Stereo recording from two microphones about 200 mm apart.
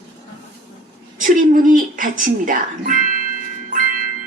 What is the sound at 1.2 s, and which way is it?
Speech, 45° right (ahead or behind).